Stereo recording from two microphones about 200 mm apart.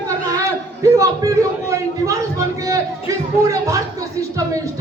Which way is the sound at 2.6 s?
15° right (ahead or behind).